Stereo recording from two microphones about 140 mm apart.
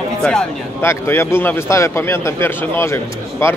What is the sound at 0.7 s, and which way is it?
A man's voice, 20° left (ahead or behind).